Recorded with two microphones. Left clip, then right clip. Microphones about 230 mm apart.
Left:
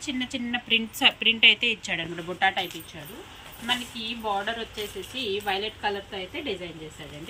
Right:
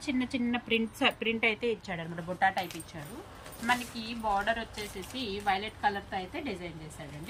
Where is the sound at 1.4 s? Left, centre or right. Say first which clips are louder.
Left 10 dB; left.